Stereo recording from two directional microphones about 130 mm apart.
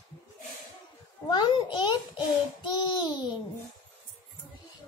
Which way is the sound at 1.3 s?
35° left (ahead or behind).